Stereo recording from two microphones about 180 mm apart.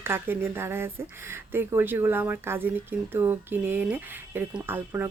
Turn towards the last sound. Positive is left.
turn(degrees=-10)  # may be behind; listen again after turning